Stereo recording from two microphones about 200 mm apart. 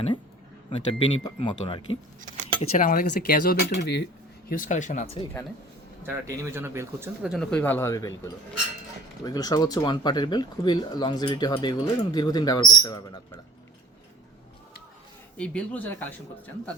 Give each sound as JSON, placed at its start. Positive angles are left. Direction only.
{"t": 0.7, "sound": "speech", "side_deg": 30}
{"t": 2.6, "sound": "speech", "side_deg": 40}
{"t": 6.0, "sound": "speech", "side_deg": -10}
{"t": 15.4, "sound": "speech", "side_deg": 5}